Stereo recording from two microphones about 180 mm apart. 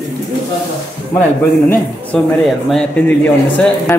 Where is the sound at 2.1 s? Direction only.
5° left (ahead or behind).